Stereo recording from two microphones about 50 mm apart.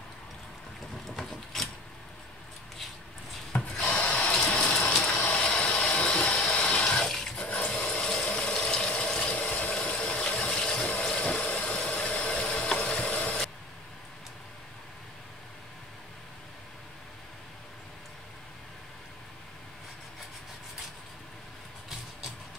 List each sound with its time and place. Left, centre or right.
1.1 s wood: centre
3.5 s rub: left
3.9 s water: left
5.9 s water: left
7.1 s water: centre
7.3 s water: left
7.9 s water: centre
10.3 s a sound: left
11.1 s vehicle: left
12.7 s a sound: left